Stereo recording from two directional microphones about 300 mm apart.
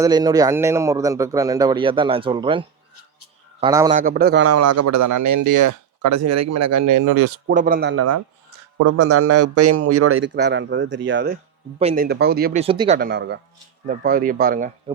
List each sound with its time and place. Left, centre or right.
0.0 s a man's voice: centre
3.9 s speech: right
4.4 s speech: right
7.5 s speech: right
7.9 s a man's voice: right
11.8 s speech: right
12.0 s speech: right
12.6 s a man's voice: centre
13.0 s speech: right